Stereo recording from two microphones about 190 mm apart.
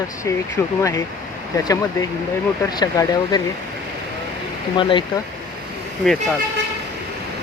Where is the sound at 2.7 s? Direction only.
20° left (ahead or behind).